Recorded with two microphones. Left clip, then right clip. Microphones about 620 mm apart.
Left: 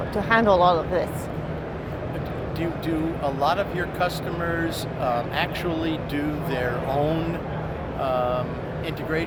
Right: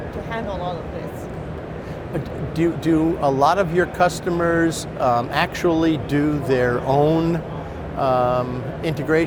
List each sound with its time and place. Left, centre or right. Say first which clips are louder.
0.3 s speech: left 11 dB; left
2.6 s speech: right 9 dB; right